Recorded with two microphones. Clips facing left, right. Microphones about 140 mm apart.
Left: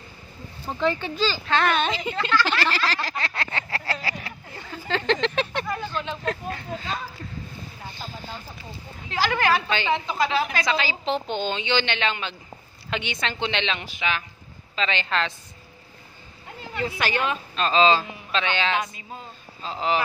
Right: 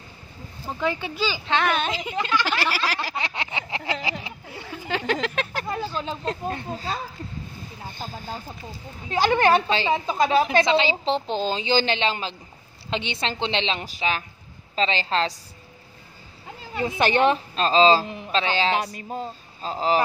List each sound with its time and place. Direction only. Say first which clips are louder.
0.7 s a woman's voice: left 2 dB; 10° right (ahead or behind)
2.6 s a sound: left 1 dB; 10° right (ahead or behind)
5.9 s a woman's voice: even; 30° right (ahead or behind)
7.9 s speech: right 4 dB; 45° right (ahead or behind)
9.1 s a woman's voice: right 4 dB; 25° right (ahead or behind)
10.4 s a woman's voice: right 6 dB; 25° right (ahead or behind)
16.8 s a woman's voice: right 6 dB; 30° right (ahead or behind)